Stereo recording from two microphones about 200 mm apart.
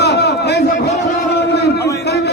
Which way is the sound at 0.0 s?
55° left (ahead or behind).